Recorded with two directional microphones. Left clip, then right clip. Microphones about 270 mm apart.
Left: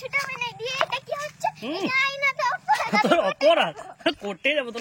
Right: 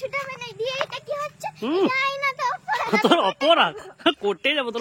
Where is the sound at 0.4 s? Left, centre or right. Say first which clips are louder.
Left 1 dB; centre.